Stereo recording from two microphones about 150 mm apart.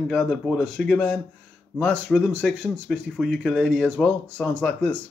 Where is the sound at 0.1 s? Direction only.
5° left (ahead or behind).